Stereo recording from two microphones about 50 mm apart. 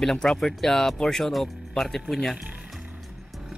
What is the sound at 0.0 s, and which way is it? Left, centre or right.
Speech, centre.